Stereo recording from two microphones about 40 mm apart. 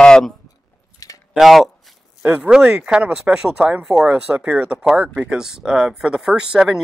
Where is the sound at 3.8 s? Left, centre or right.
Centre.